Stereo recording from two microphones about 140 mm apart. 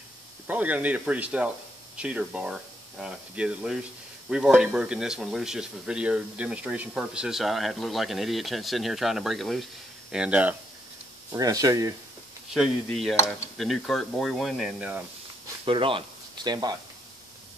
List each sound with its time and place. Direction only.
0.5 s speech: 10° right (ahead or behind)
11.3 s speech: 25° right (ahead or behind)
12.5 s speech: centre (ahead or behind)
15.6 s speech: 40° right (ahead or behind)